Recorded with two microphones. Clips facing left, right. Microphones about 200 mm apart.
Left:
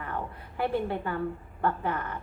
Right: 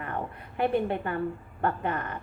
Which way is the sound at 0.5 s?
20° right (ahead or behind).